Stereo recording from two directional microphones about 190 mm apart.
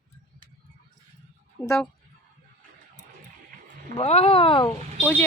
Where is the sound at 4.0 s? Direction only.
30° left (ahead or behind).